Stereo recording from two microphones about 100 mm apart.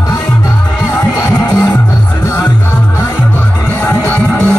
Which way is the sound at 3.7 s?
20° left (ahead or behind).